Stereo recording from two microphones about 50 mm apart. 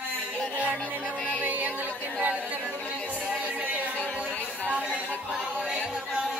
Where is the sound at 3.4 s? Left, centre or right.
Right.